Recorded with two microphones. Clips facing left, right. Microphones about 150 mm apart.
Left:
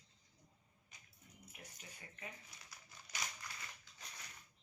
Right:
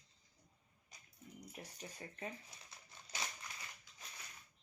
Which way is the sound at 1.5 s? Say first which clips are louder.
Right 5 dB; 35° right (ahead or behind).